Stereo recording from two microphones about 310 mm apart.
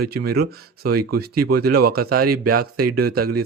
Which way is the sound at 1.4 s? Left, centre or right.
Right.